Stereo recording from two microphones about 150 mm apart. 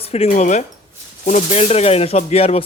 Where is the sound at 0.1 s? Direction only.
45° left (ahead or behind).